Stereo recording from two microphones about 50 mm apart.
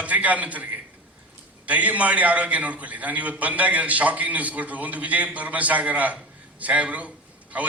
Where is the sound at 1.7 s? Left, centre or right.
Right.